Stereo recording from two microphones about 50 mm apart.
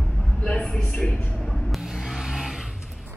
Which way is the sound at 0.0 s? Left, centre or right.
Centre.